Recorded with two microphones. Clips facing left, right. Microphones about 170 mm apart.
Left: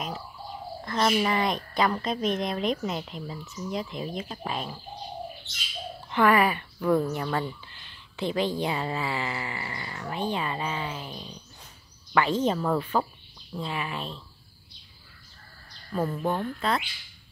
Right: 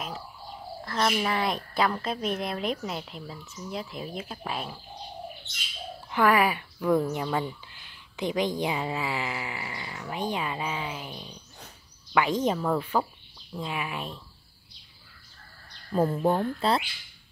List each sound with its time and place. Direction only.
0.8 s a woman's voice: centre (ahead or behind)
6.0 s speech: 10° right (ahead or behind)
12.5 s a woman's voice: centre (ahead or behind)
15.9 s speech: 25° right (ahead or behind)